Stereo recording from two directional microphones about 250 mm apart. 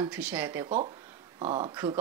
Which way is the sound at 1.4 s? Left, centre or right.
Right.